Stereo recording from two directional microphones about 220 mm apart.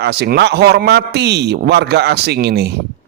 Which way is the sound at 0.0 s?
45° right (ahead or behind).